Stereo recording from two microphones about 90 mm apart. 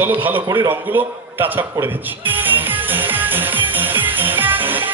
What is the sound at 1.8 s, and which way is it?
Music, 20° right (ahead or behind).